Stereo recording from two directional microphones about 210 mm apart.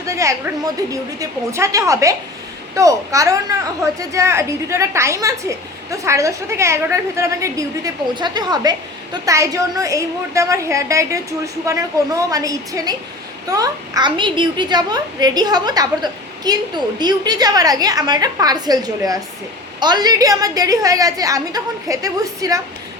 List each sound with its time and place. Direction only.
0.0 s a woman's voice: 15° right (ahead or behind)